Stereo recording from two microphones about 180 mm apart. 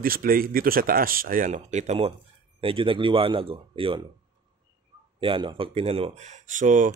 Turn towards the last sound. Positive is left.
turn(degrees=-45)  # may be behind; listen again after turning